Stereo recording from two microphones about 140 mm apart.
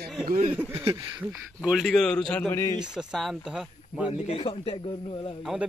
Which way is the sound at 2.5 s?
20° left (ahead or behind).